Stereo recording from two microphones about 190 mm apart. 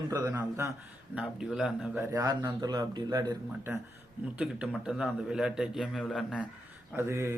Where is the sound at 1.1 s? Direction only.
5° right (ahead or behind).